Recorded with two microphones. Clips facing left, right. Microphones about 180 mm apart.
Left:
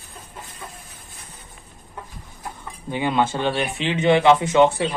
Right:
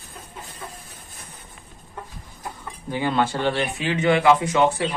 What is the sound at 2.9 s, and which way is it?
Speech, 20° left (ahead or behind).